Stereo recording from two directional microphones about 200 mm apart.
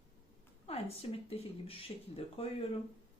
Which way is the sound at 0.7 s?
30° left (ahead or behind).